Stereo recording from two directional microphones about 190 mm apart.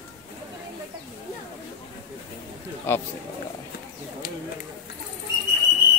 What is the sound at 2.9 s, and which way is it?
Speech, 10° left (ahead or behind).